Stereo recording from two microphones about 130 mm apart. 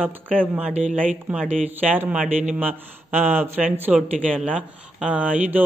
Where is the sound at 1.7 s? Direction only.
15° right (ahead or behind).